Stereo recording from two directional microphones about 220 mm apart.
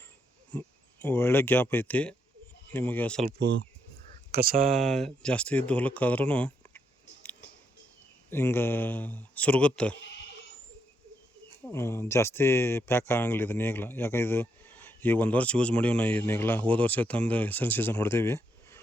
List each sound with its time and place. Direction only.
0.5 s speech: 10° left (ahead or behind)
4.3 s speech: 40° right (ahead or behind)
4.8 s speech: centre (ahead or behind)
8.3 s speech: 10° left (ahead or behind)
11.6 s speech: 10° left (ahead or behind)